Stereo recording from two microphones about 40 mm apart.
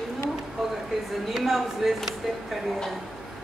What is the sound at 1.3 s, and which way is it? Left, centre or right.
Speech, centre.